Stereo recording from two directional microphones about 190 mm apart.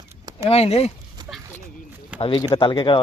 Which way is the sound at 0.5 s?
30° left (ahead or behind).